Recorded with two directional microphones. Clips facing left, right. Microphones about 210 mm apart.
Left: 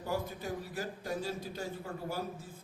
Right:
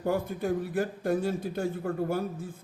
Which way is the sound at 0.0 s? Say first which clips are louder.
Right 8 dB; 55° right (ahead or behind).